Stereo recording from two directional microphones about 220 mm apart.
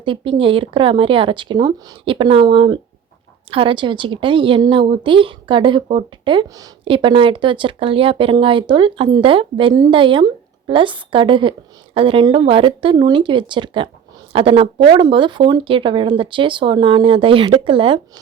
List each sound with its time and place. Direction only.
0.0 s speech: 25° right (ahead or behind)